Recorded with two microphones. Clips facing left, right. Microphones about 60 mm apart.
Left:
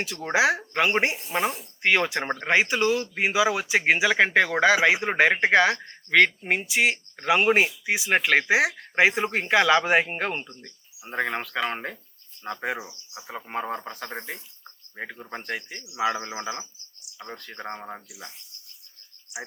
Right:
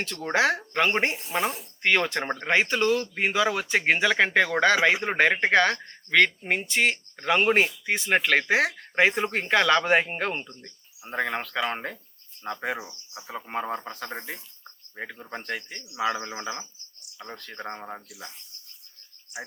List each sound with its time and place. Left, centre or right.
0.0 s speech: centre
1.3 s speech: left
1.8 s speech: centre
19.3 s speech: right